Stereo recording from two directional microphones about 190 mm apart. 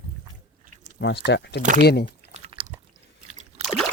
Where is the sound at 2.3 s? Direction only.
30° right (ahead or behind).